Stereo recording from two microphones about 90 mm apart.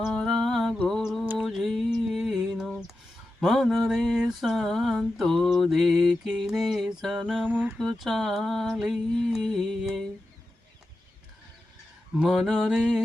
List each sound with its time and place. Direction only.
0.0 s music: 5° left (ahead or behind)
0.9 s mantra: 5° left (ahead or behind)
1.4 s music: centre (ahead or behind)
3.4 s a sound: centre (ahead or behind)
7.4 s speech: 20° right (ahead or behind)
7.8 s a sound: centre (ahead or behind)
12.2 s mantra: 5° right (ahead or behind)